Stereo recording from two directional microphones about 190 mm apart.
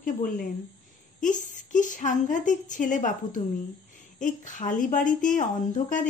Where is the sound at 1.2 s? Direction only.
40° left (ahead or behind).